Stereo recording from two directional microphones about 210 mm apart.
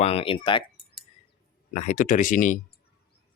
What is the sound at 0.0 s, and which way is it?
Speech, 25° left (ahead or behind).